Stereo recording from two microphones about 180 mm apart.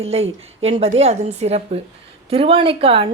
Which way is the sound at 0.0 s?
35° right (ahead or behind).